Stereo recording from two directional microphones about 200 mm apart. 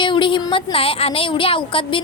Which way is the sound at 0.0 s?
25° left (ahead or behind).